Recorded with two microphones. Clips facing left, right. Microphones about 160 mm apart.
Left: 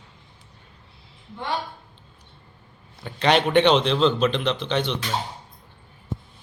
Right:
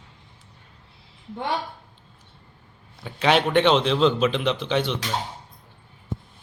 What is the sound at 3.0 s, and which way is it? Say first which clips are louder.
A man's voice: even; 5° right (ahead or behind).